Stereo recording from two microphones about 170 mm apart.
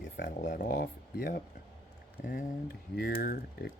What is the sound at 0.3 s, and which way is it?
Speech, 50° left (ahead or behind).